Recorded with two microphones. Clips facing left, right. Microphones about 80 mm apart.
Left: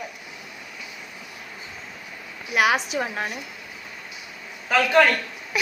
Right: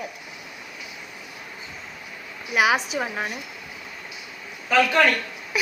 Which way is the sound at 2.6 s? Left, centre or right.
Centre.